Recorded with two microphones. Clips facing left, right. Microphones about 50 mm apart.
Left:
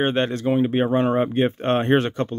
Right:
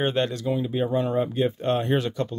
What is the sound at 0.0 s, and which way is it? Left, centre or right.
Speech, left.